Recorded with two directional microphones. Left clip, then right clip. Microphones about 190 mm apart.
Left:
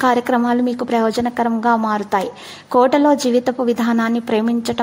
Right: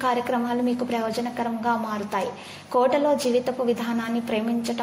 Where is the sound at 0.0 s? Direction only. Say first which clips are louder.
Left 8 dB; 40° left (ahead or behind).